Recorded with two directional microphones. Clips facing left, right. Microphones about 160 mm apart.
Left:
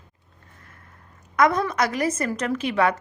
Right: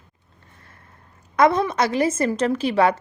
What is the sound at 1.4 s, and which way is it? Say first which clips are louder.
A woman's voice: right 3 dB; 30° right (ahead or behind).